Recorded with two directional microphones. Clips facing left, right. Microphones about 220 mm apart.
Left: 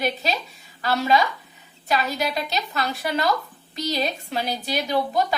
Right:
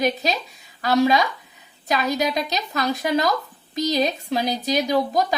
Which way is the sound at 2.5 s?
40° right (ahead or behind).